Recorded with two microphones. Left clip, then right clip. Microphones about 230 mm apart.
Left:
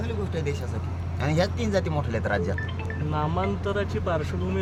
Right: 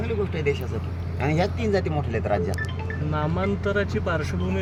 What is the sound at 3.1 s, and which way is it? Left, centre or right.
Speech, right.